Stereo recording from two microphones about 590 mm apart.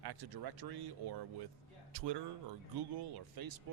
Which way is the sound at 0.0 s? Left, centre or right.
Right.